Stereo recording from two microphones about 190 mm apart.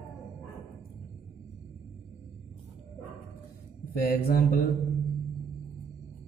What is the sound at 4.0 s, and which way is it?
Speech, 50° left (ahead or behind).